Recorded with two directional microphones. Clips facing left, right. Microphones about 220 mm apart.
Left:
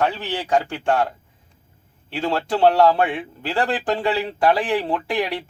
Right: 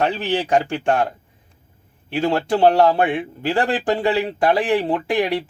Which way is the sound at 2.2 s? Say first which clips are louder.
Right 2 dB; 15° right (ahead or behind).